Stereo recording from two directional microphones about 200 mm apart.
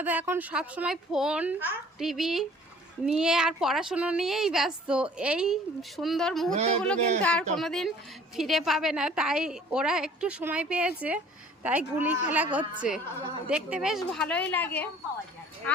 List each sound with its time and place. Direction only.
0.0 s a woman's voice: 10° right (ahead or behind)
6.5 s speech: 30° right (ahead or behind)
7.2 s a woman's voice: 5° left (ahead or behind)